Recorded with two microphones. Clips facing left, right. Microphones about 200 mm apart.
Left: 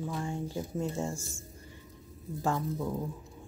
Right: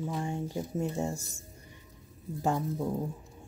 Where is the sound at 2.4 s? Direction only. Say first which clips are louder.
Right 1 dB; 20° right (ahead or behind).